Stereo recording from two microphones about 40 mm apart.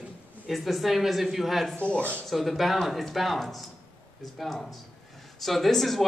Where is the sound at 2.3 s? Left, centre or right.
Centre.